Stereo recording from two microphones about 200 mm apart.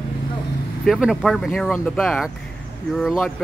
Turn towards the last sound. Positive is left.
turn(degrees=0)  # may be behind; listen again after turning